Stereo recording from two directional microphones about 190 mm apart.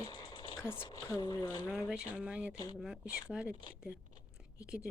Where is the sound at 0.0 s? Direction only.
25° left (ahead or behind).